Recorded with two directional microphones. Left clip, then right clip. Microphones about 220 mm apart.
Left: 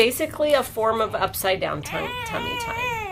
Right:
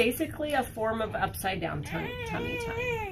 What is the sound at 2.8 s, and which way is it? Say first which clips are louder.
Baby cry: left 5 dB; 10° left (ahead or behind).